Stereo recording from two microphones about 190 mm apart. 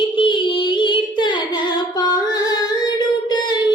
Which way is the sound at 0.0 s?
25° left (ahead or behind).